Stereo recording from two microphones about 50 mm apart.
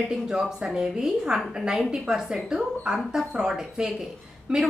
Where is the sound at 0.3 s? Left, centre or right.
Centre.